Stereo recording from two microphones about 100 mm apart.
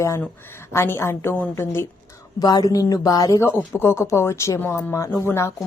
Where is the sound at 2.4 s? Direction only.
40° left (ahead or behind).